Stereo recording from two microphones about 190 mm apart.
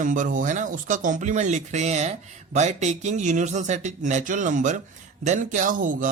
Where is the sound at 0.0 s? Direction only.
40° right (ahead or behind).